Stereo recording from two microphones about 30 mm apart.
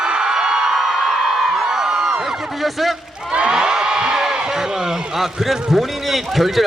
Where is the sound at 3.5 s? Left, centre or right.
Right.